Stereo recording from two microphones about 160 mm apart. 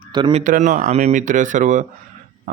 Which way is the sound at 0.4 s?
50° right (ahead or behind).